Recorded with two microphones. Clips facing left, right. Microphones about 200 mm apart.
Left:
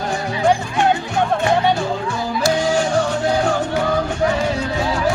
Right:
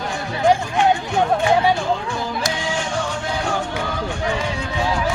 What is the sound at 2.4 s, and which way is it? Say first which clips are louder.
Music: left 7 dB; 35° left (ahead or behind).